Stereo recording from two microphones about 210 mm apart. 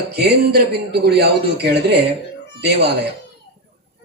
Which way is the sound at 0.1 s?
50° right (ahead or behind).